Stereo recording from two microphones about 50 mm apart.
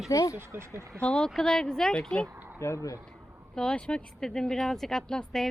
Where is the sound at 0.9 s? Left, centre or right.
Centre.